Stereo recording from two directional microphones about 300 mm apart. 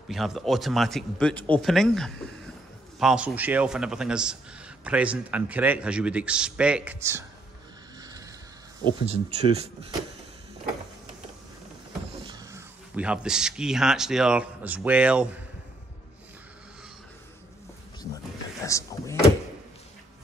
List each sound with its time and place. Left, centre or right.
0.1 s a man's voice: centre
9.0 s speech: right
12.3 s speech: centre
18.7 s speech: centre